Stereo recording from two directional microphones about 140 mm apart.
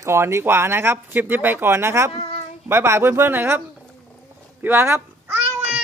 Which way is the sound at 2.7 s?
20° right (ahead or behind).